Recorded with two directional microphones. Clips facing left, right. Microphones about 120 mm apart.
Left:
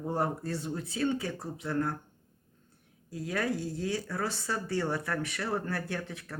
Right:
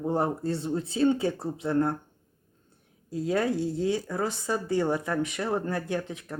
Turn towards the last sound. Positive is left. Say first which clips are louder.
# right 6 dB
turn(degrees=-20)  # may be behind; listen again after turning